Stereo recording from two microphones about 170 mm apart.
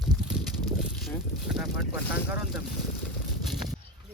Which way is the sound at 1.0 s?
5° right (ahead or behind).